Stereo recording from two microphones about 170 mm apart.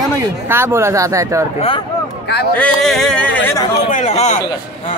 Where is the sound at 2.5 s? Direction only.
5° left (ahead or behind).